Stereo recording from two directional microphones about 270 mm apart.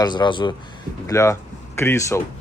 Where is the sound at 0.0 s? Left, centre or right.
Centre.